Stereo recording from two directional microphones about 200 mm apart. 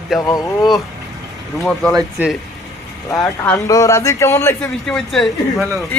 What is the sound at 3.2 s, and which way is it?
A man's voice, 15° left (ahead or behind).